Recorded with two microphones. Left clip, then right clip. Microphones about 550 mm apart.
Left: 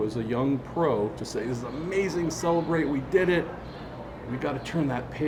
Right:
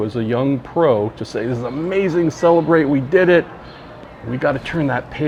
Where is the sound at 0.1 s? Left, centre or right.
Right.